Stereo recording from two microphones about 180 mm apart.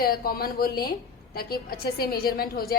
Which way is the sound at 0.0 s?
55° left (ahead or behind).